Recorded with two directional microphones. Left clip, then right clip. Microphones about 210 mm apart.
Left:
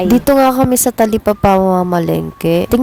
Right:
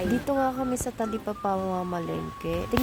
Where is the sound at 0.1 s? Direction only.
40° left (ahead or behind).